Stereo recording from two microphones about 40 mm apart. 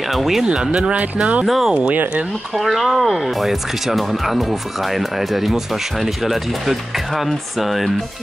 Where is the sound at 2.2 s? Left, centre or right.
Centre.